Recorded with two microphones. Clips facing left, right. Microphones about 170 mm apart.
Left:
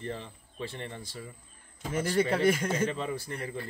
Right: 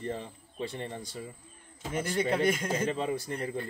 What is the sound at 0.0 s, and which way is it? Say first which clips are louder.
Speech: right 2 dB; 15° right (ahead or behind).